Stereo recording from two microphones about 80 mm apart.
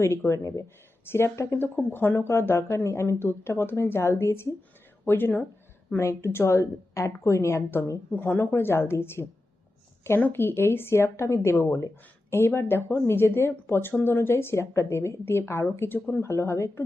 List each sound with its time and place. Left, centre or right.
0.0 s speech: left
8.1 s speech: left
10.3 s speech: left